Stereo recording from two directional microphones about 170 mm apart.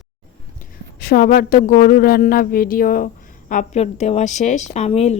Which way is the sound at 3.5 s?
45° left (ahead or behind).